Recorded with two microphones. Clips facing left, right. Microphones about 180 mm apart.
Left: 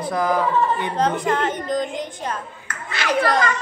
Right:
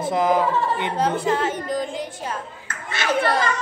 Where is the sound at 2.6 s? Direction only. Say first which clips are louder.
Even; 25° right (ahead or behind).